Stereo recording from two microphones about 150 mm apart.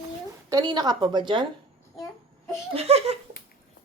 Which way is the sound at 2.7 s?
45° right (ahead or behind).